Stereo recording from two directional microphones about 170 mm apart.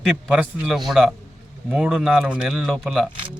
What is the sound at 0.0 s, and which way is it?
A man's voice, centre (ahead or behind).